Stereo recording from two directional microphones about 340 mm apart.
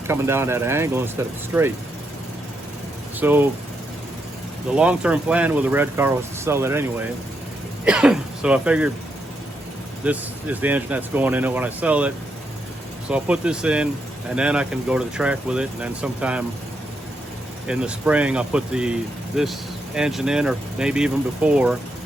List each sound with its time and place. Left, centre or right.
0.1 s speech: centre
3.2 s speech: centre
4.8 s speech: centre
10.0 s speech: centre
17.7 s speech: centre